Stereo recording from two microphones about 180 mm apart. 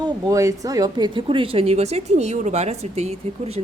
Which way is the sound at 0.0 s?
20° right (ahead or behind).